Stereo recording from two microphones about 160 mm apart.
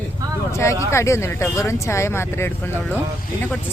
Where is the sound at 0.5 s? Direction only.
20° left (ahead or behind).